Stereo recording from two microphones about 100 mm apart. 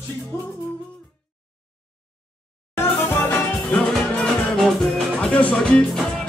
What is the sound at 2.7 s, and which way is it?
Music, 20° left (ahead or behind).